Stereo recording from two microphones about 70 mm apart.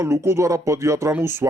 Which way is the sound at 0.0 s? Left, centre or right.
Right.